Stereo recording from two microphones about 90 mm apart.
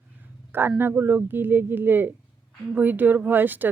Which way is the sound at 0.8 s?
25° right (ahead or behind).